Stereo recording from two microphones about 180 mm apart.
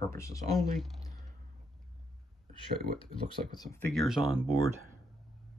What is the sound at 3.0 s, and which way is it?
Speech, 25° left (ahead or behind).